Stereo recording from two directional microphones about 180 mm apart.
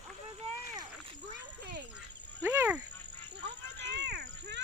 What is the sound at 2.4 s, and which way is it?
Speech, 10° right (ahead or behind).